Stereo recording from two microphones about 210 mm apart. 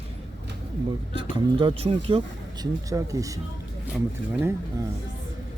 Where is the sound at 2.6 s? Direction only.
15° right (ahead or behind).